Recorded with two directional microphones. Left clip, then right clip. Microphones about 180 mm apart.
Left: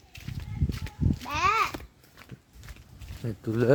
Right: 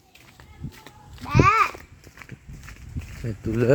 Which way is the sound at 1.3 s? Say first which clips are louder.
Right 6 dB; 25° left (ahead or behind).